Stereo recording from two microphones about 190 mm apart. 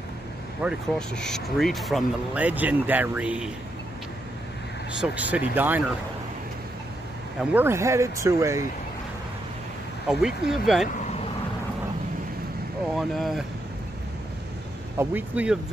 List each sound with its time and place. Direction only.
0.6 s speech: centre (ahead or behind)
5.0 s speech: 5° right (ahead or behind)
7.3 s speech: 10° right (ahead or behind)
10.0 s speech: 5° right (ahead or behind)
12.9 s speech: centre (ahead or behind)
15.0 s speech: 10° right (ahead or behind)